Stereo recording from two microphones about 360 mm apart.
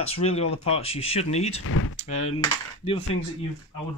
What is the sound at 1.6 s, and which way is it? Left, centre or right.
Speech, left.